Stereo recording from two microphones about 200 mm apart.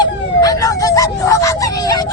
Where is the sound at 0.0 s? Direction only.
20° left (ahead or behind).